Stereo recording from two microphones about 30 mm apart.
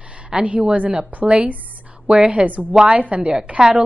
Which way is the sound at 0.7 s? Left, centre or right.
Right.